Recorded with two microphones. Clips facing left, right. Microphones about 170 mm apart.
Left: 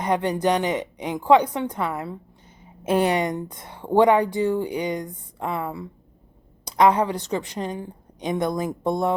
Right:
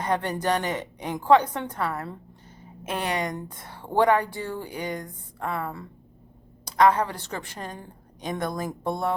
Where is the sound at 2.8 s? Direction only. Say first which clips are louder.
Left 8 dB; 30° left (ahead or behind).